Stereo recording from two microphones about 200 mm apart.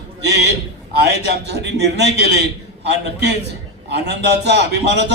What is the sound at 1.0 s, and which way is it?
A man's voice, 55° right (ahead or behind).